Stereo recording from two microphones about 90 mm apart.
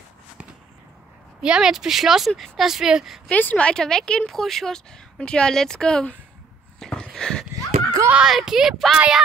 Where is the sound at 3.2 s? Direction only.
15° left (ahead or behind).